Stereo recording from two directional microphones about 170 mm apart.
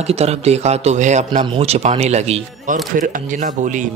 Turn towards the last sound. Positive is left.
turn(degrees=-50)  # may be behind; listen again after turning